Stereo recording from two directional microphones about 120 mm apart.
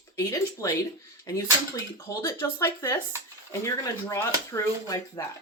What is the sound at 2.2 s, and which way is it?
Speech, 25° left (ahead or behind).